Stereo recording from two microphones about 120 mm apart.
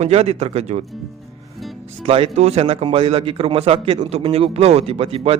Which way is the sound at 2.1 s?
50° right (ahead or behind).